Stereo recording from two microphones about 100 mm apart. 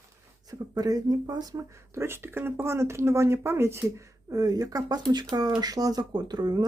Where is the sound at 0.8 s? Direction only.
40° right (ahead or behind).